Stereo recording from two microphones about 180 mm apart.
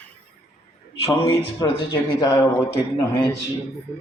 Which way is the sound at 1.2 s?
30° left (ahead or behind).